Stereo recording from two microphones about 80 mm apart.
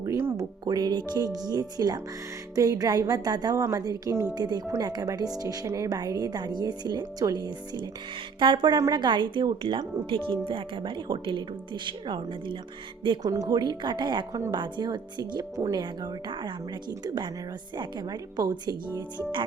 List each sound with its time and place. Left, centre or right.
0.0 s music: right
0.6 s a woman's voice: right
3.5 s a woman's voice: right
8.4 s speech: right
13.2 s speech: right
14.5 s speech: right
17.7 s speech: right